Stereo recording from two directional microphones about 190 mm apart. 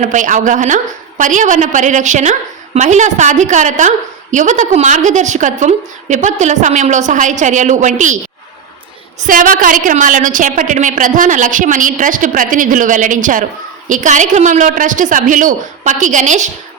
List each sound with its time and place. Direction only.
0.0 s a woman's voice: 40° right (ahead or behind)
9.2 s a woman's voice: 45° right (ahead or behind)